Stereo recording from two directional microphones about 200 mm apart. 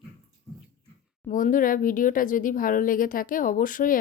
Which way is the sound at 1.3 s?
40° left (ahead or behind).